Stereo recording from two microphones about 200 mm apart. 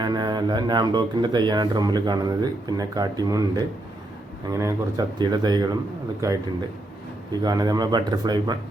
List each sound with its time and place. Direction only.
0.0 s speech: 20° right (ahead or behind)
7.4 s speech: 20° right (ahead or behind)